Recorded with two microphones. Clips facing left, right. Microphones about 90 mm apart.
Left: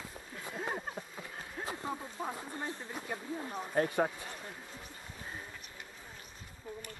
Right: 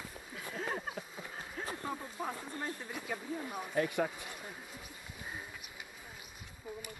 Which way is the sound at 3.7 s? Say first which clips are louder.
Left 2 dB; 40° left (ahead or behind).